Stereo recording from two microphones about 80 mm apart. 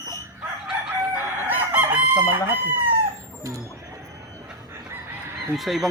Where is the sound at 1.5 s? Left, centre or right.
Right.